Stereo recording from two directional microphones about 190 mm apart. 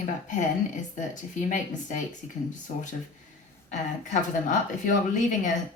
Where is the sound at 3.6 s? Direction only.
40° left (ahead or behind).